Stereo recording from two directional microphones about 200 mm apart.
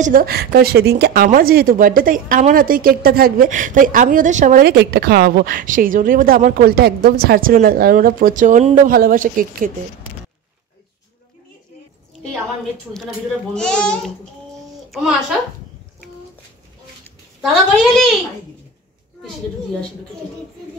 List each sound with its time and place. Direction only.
0.0 s speech: 45° right (ahead or behind)
13.6 s a woman's voice: 5° left (ahead or behind)
17.4 s a woman's voice: centre (ahead or behind)